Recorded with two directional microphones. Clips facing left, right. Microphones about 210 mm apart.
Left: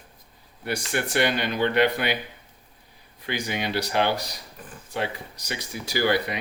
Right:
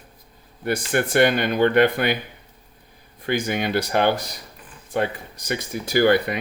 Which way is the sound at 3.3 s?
50° right (ahead or behind).